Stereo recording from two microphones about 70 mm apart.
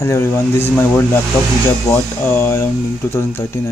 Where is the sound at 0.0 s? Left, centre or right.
Left.